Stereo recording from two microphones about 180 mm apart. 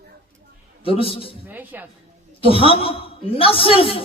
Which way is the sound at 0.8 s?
30° left (ahead or behind).